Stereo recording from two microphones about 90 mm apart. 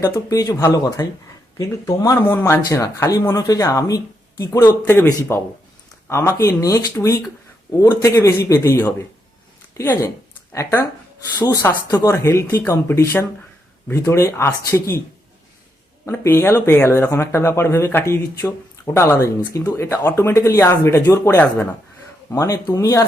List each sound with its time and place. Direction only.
0.0 s speech: 40° left (ahead or behind)
2.2 s speech: 25° left (ahead or behind)
4.9 s speech: 25° left (ahead or behind)
11.3 s speech: 40° left (ahead or behind)
11.6 s speech: 25° left (ahead or behind)
16.0 s speech: 25° left (ahead or behind)